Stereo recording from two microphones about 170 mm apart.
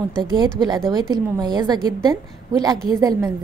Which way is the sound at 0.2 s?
25° right (ahead or behind).